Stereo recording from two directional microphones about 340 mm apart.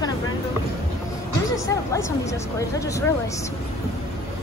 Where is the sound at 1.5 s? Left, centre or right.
Centre.